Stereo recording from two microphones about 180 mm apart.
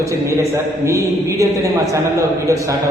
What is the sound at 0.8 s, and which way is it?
A man's voice, 15° right (ahead or behind).